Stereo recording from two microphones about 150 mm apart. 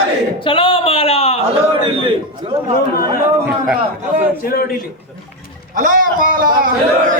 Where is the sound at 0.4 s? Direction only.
35° left (ahead or behind).